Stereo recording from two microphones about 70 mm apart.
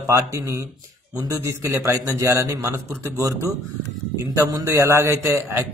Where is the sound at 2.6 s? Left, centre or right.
Right.